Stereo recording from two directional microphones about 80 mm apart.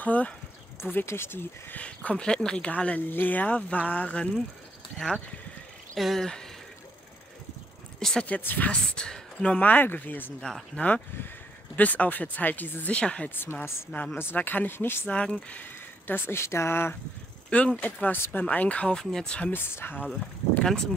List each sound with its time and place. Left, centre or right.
0.0 s speech: centre
0.9 s speech: left
1.8 s speech: centre
8.0 s speech: centre
8.3 s speech: left
10.4 s speech: centre
11.7 s speech: centre
13.4 s speech: left
15.1 s speech: centre; by 16.9 s left
17.5 s speech: centre
18.0 s speech: left
19.5 s speech: left